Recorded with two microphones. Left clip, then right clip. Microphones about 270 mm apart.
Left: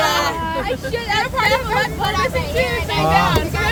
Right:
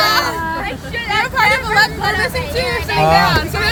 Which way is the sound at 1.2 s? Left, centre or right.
Right.